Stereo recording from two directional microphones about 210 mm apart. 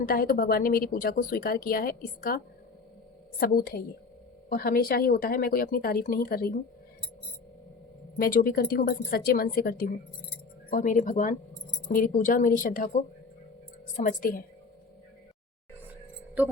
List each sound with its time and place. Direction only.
0.0 s a woman's voice: 45° left (ahead or behind)
8.2 s a woman's voice: 45° left (ahead or behind)